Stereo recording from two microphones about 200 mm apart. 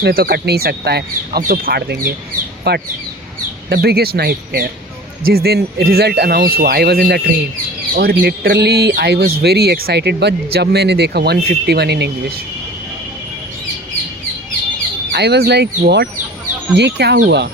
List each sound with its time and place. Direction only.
0.0 s speech: 50° right (ahead or behind)
15.1 s speech: 55° right (ahead or behind)